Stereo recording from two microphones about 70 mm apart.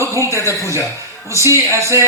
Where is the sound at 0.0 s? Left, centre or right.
Right.